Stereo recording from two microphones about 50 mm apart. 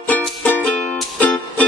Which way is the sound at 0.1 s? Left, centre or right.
Left.